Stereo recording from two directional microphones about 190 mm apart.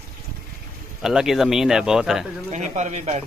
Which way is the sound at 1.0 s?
Centre (ahead or behind).